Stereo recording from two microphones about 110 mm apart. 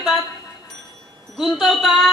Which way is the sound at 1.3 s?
Centre (ahead or behind).